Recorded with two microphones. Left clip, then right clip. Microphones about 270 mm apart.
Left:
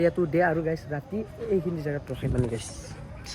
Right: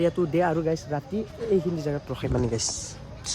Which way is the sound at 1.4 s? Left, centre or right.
Right.